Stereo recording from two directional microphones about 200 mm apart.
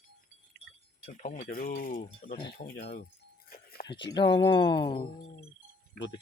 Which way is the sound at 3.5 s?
45° left (ahead or behind).